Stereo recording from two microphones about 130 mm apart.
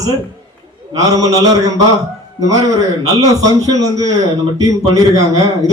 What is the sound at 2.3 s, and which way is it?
A man's voice, 25° right (ahead or behind).